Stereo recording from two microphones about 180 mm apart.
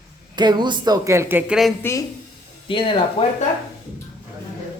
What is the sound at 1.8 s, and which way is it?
Speech, 15° left (ahead or behind).